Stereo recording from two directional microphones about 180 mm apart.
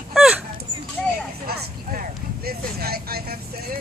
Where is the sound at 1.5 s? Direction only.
55° right (ahead or behind).